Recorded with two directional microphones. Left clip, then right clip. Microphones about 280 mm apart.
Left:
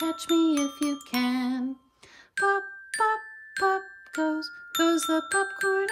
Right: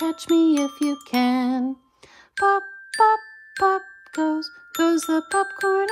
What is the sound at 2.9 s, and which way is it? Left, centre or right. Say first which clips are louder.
Music: right 8 dB; centre.